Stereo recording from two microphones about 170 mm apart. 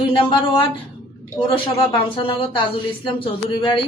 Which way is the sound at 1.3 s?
30° left (ahead or behind).